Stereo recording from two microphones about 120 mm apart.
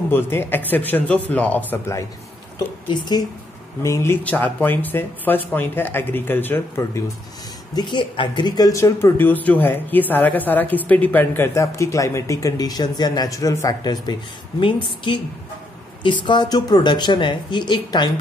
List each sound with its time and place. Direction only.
0.1 s speech: 20° left (ahead or behind)
2.9 s speech: 35° left (ahead or behind)
3.8 s speech: 25° left (ahead or behind)
7.7 s speech: 40° left (ahead or behind)
14.6 s a woman's voice: 45° left (ahead or behind)